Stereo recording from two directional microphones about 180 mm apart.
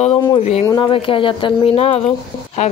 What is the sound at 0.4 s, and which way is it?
Speech, 35° left (ahead or behind).